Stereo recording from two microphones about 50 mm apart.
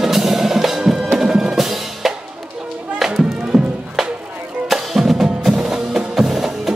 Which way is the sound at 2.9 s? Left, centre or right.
Centre.